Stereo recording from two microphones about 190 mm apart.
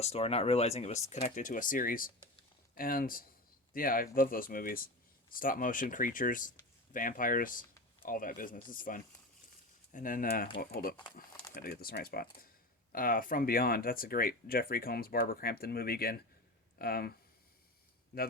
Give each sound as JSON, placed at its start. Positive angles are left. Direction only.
{"t": 0.0, "sound": "speech", "side_deg": 35}